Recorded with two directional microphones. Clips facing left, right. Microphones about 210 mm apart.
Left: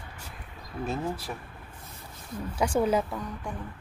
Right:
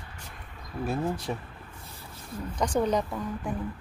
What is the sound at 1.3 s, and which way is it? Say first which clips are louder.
Speech: right 5 dB; 15° right (ahead or behind).